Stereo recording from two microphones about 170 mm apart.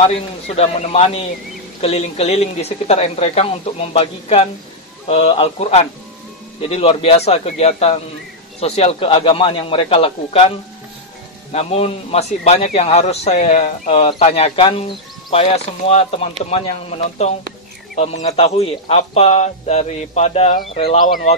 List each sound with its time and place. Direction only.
0.0 s a man's voice: 35° left (ahead or behind)
11.5 s a man's voice: 35° left (ahead or behind)
17.9 s a man's voice: 45° left (ahead or behind)